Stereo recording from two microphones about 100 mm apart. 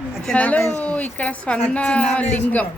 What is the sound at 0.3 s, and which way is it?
Speech, 15° left (ahead or behind).